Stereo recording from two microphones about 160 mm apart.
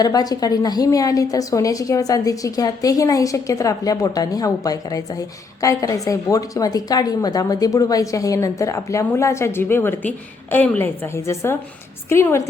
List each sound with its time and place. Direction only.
0.0 s a woman's voice: 25° left (ahead or behind)